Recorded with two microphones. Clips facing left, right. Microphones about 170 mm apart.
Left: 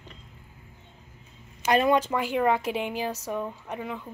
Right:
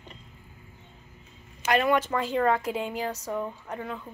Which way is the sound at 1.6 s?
20° left (ahead or behind).